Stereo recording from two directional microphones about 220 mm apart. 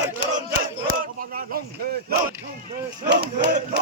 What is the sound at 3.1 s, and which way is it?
Speech, 50° right (ahead or behind).